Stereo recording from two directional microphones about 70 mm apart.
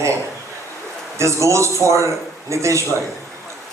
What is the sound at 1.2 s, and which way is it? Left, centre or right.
Speech, right.